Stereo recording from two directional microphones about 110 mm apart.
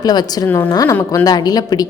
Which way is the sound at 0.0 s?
40° left (ahead or behind).